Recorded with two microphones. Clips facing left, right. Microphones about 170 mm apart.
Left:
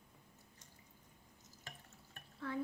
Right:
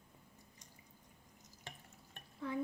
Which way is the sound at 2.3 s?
15° right (ahead or behind).